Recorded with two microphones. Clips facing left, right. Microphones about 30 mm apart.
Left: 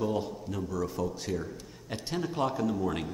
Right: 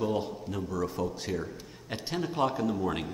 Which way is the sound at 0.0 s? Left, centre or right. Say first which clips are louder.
Right 1 dB; centre.